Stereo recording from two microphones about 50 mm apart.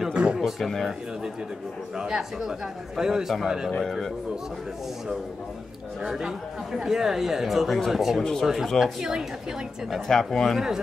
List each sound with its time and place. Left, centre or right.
0.1 s speech: right
0.4 s speech: centre
2.0 s speech: centre
3.8 s speech: centre
6.0 s speech: centre
8.2 s speech: centre